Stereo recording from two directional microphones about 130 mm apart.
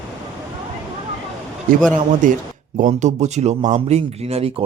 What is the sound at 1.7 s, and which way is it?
Speech, 90° right.